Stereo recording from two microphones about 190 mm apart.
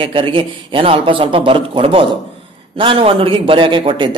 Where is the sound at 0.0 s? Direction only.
25° right (ahead or behind).